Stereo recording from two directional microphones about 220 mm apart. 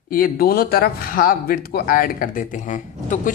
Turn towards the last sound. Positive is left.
turn(degrees=35)  # may be behind; listen again after turning